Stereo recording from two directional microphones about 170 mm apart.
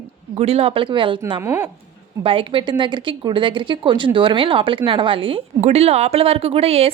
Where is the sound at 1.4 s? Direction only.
15° right (ahead or behind).